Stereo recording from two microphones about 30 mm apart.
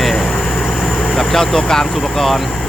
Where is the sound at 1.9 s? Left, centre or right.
Centre.